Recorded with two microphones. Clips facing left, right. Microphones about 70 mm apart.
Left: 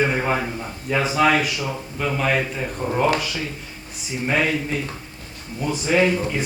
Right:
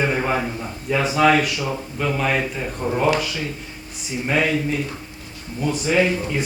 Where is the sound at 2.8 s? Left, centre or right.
Centre.